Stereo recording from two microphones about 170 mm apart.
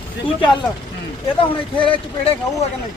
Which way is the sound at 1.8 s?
30° left (ahead or behind).